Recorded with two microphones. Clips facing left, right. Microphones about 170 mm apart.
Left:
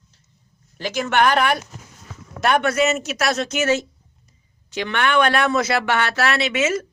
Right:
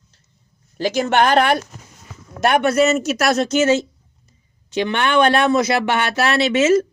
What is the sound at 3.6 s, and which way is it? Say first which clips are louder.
Speech: right 4 dB; 25° right (ahead or behind).